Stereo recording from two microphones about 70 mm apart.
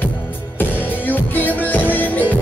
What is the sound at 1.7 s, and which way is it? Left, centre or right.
Music, left.